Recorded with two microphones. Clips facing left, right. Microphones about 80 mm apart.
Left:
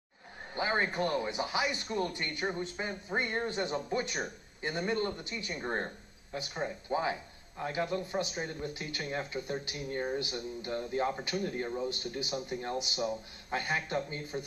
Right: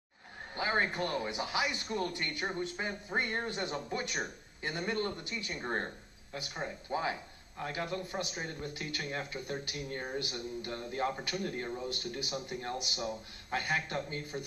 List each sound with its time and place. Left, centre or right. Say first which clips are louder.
0.6 s speech: left 1 dB; centre